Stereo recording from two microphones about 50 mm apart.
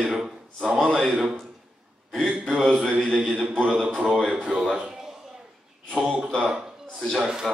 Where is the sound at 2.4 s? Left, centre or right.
Centre.